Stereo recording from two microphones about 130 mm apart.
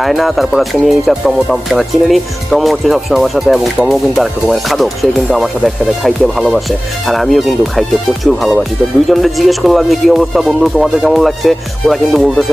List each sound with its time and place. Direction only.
0.0 s speech: centre (ahead or behind)